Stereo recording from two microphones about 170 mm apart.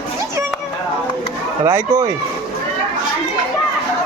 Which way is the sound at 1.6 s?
15° right (ahead or behind).